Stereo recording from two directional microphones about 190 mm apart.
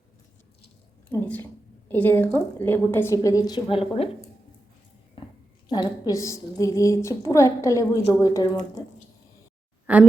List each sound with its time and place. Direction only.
1.1 s a woman's voice: 10° left (ahead or behind); by 4.1 s 30° left (ahead or behind)
5.2 s a sound: 25° left (ahead or behind)
5.6 s a woman's voice: 20° left (ahead or behind)
9.9 s a woman's voice: 5° right (ahead or behind)